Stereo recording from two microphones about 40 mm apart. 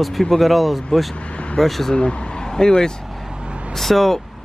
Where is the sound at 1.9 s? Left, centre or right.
Left.